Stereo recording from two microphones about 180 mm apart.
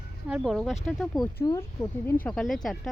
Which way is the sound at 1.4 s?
15° left (ahead or behind).